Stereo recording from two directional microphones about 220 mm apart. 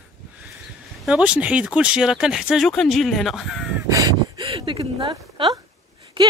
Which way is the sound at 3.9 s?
15° right (ahead or behind).